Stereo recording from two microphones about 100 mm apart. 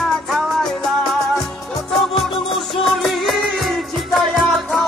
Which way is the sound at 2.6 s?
Centre (ahead or behind).